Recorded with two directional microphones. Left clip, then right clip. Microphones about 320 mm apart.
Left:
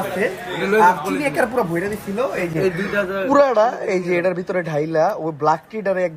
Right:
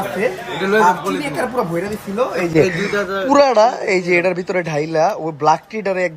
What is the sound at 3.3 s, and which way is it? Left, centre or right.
Speech, centre.